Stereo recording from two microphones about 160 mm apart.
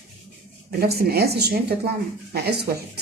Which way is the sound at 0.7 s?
85° right.